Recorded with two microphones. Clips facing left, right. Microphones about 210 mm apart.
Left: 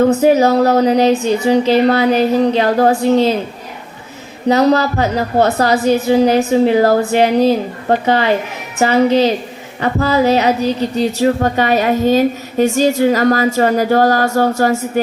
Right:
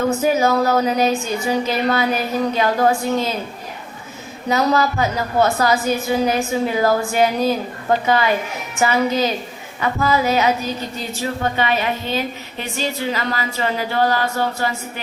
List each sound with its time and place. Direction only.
0.0 s speech: 35° left (ahead or behind)
3.0 s a woman's voice: 25° left (ahead or behind)
4.4 s a woman's voice: 30° left (ahead or behind)